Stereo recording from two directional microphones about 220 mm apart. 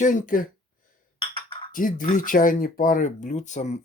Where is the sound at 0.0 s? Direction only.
35° left (ahead or behind).